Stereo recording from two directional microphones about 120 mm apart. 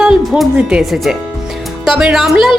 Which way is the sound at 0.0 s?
5° right (ahead or behind).